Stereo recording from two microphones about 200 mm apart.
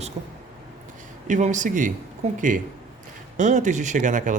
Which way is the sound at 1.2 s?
40° right (ahead or behind).